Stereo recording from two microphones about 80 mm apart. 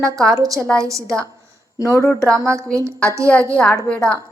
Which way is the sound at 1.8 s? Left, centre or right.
Left.